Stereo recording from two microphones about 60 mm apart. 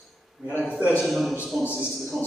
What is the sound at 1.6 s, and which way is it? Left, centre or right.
Speech, centre.